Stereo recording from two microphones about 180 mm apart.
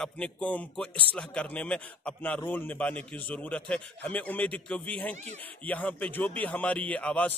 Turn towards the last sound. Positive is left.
turn(degrees=10)  # may be behind; listen again after turning